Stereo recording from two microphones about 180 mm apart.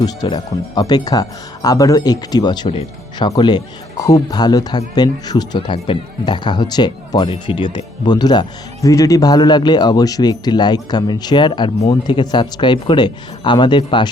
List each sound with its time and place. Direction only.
0.0 s speech: 20° left (ahead or behind)